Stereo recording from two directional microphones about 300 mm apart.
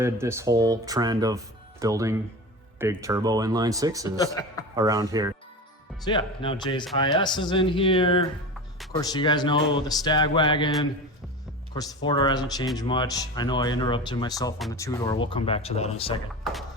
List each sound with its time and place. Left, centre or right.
0.0 s speech: centre
6.1 s speech: centre
12.0 s speech: centre